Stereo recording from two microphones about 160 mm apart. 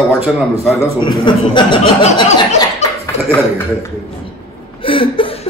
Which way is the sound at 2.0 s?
45° left (ahead or behind).